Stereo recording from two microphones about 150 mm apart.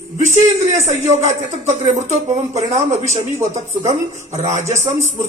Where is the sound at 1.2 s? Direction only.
50° right (ahead or behind).